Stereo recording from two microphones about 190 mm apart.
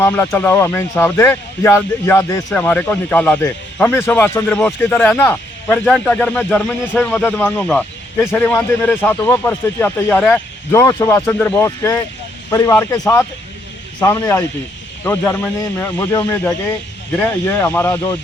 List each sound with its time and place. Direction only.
0.0 s speech: 10° left (ahead or behind)